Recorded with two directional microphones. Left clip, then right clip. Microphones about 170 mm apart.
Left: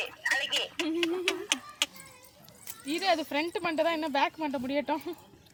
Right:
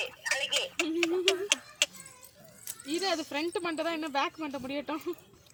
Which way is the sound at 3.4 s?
80° left.